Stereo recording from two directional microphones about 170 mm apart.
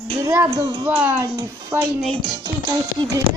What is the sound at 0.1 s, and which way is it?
Speech, 20° right (ahead or behind).